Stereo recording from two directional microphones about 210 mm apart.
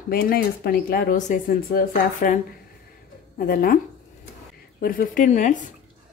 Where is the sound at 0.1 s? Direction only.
45° left (ahead or behind).